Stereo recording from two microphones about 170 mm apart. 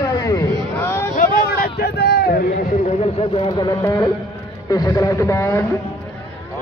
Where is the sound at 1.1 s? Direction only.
55° left (ahead or behind).